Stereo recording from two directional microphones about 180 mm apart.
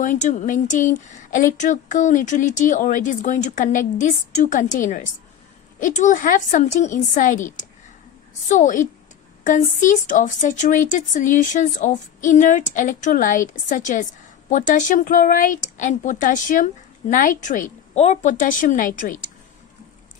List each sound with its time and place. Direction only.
0.0 s speech: 45° left (ahead or behind)